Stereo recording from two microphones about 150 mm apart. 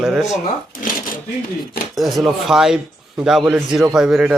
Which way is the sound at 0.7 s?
70° left (ahead or behind).